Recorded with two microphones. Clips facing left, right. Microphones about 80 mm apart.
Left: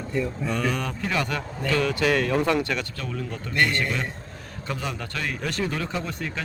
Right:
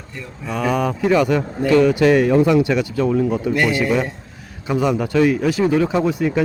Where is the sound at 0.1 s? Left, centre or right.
Centre.